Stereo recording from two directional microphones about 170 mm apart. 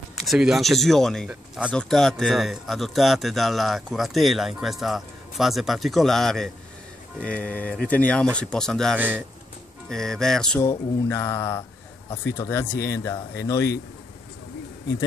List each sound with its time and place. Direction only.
0.1 s speech: centre (ahead or behind)
8.9 s speech: 10° right (ahead or behind)
9.8 s speech: 5° left (ahead or behind)
10.6 s speech: 15° left (ahead or behind)